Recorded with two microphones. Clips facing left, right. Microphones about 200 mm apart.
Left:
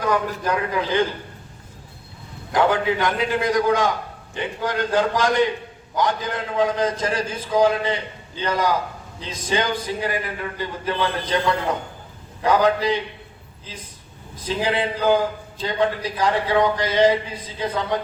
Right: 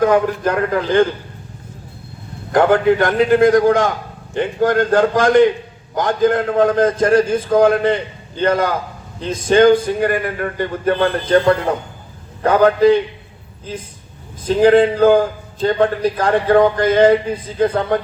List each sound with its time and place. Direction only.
0.0 s a man's voice: 50° right (ahead or behind)
2.5 s a man's voice: 50° right (ahead or behind)
14.4 s a man's voice: 50° right (ahead or behind)